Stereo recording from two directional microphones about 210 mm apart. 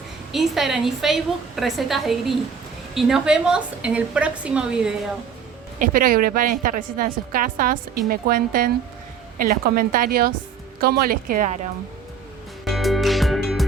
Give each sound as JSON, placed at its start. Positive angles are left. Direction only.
{"t": 0.3, "sound": "a woman's voice", "side_deg": 0}
{"t": 5.8, "sound": "a woman's voice", "side_deg": -40}
{"t": 12.6, "sound": "music", "side_deg": 0}